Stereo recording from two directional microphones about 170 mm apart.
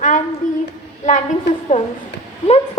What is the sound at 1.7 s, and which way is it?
Speech, 40° left (ahead or behind).